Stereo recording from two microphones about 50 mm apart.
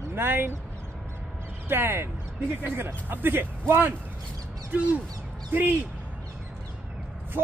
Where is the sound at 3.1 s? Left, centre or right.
Right.